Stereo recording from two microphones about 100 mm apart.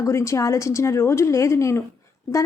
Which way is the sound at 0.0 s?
30° left (ahead or behind).